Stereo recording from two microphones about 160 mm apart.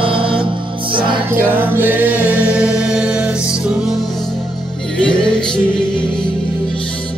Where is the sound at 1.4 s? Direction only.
10° right (ahead or behind).